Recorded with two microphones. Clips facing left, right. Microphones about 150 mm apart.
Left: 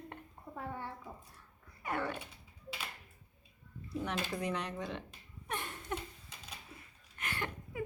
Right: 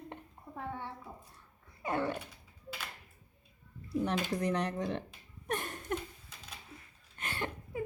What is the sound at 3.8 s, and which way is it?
Speech, 35° right (ahead or behind).